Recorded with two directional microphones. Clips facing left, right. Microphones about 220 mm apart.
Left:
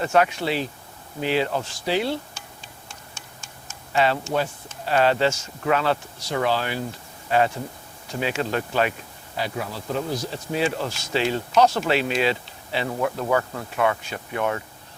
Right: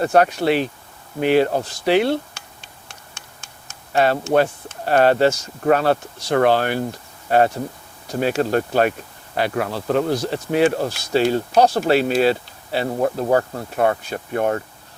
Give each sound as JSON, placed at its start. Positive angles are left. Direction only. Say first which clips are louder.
{"t": 0.0, "sound": "speech", "louder": "right 4 dB", "side_deg": -40}
{"t": 0.4, "sound": "speech", "louder": "right 7 dB", "side_deg": -60}
{"t": 1.8, "sound": "speech", "louder": "right 8 dB", "side_deg": -65}
{"t": 3.9, "sound": "speech", "louder": "right 4 dB", "side_deg": -50}
{"t": 4.2, "sound": "speech", "louder": "right 8 dB", "side_deg": -65}
{"t": 9.3, "sound": "speech", "louder": "right 7 dB", "side_deg": -65}
{"t": 10.8, "sound": "speech", "louder": "right 6 dB", "side_deg": -40}